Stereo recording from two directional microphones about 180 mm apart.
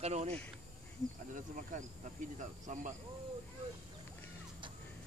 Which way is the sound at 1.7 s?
45° right (ahead or behind).